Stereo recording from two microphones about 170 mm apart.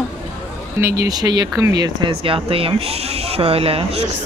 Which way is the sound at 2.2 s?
35° right (ahead or behind).